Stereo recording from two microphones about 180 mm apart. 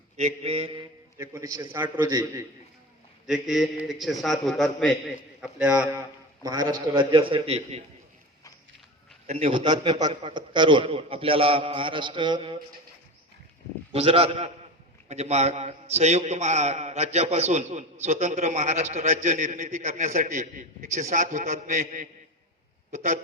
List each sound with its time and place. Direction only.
0.2 s a man's voice: 35° right (ahead or behind)
1.2 s a man's voice: 15° right (ahead or behind)
3.2 s a man's voice: centre (ahead or behind)
6.4 s a man's voice: 20° right (ahead or behind)
9.2 s a man's voice: 35° right (ahead or behind)
13.9 s a man's voice: 30° right (ahead or behind)